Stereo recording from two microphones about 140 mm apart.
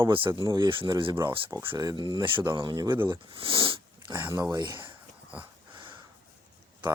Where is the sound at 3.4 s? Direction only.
40° right (ahead or behind).